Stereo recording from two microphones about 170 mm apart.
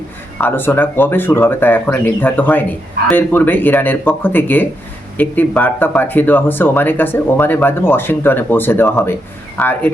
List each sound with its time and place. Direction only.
0.3 s speech: 10° left (ahead or behind)